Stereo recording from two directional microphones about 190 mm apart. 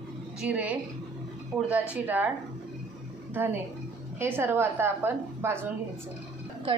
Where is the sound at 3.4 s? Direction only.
10° right (ahead or behind).